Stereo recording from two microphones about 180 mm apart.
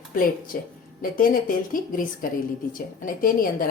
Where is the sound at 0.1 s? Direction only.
50° left (ahead or behind).